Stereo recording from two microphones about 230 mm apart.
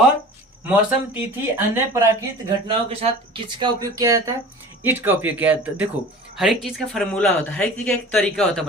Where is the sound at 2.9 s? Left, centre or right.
Right.